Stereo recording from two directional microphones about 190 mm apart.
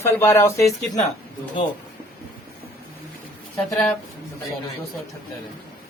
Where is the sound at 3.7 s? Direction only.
5° left (ahead or behind).